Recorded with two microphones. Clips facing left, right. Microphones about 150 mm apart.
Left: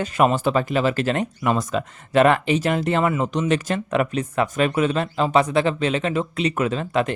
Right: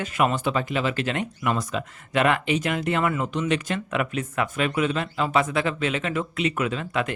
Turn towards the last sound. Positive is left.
turn(degrees=35)  # may be behind; listen again after turning